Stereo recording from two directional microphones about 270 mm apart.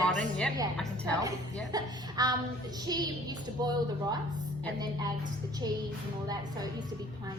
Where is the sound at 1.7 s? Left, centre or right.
Centre.